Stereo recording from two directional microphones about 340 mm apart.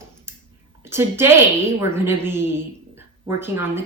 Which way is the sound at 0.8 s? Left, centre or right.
Centre.